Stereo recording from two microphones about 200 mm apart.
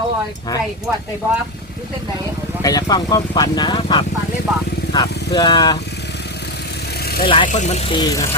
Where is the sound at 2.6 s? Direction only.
20° left (ahead or behind).